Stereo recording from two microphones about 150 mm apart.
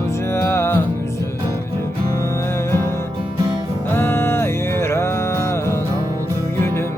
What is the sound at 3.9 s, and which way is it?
Music, 15° left (ahead or behind).